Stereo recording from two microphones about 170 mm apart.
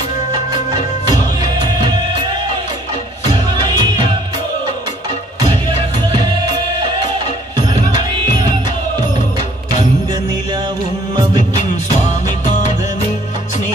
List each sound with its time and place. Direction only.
3.6 s music: 25° right (ahead or behind)
5.4 s music: 25° right (ahead or behind)
7.5 s music: 25° right (ahead or behind)